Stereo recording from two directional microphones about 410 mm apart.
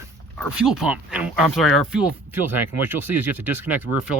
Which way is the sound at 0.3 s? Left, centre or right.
Centre.